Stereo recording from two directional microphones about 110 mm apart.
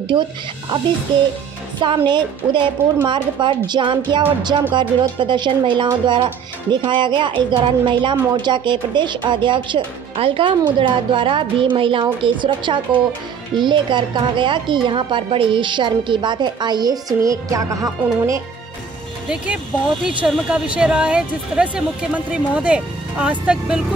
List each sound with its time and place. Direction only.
0.1 s a woman's voice: 45° right (ahead or behind)
10.8 s a woman's voice: 50° right (ahead or behind); by 18.4 s 30° right (ahead or behind)
19.2 s speech: 10° right (ahead or behind)